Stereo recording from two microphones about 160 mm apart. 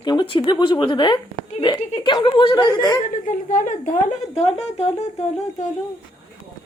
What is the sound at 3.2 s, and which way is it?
Speech, 55° left (ahead or behind).